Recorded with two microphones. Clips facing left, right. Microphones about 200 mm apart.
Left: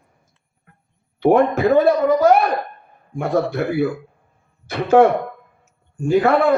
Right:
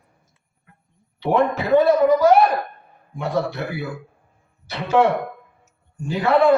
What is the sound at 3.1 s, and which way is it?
Speech, 50° left (ahead or behind).